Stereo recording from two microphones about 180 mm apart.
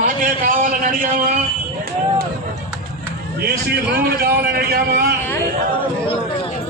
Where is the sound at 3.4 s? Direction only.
60° right (ahead or behind).